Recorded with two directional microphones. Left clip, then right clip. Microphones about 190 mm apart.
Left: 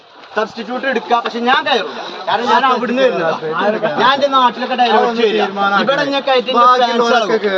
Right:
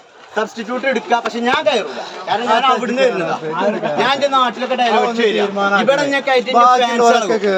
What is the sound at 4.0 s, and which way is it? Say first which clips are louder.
Speech: left 2 dB; 25° right (ahead or behind).